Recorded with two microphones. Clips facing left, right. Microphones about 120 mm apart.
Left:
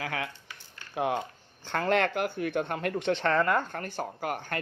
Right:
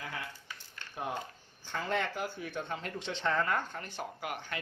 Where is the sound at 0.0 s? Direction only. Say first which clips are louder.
Left 8 dB; 90° left.